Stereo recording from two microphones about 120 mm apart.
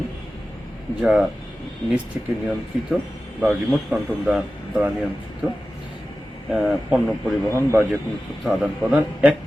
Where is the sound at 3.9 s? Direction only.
10° right (ahead or behind).